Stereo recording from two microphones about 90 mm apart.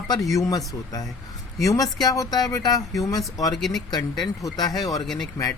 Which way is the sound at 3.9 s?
45° left (ahead or behind).